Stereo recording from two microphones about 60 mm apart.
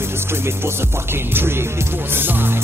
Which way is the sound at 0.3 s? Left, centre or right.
Right.